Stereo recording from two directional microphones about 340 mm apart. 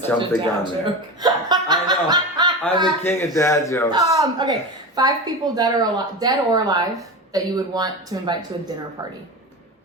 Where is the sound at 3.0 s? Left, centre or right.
Centre.